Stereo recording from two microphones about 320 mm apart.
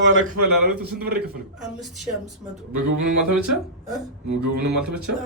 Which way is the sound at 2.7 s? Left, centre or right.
Right.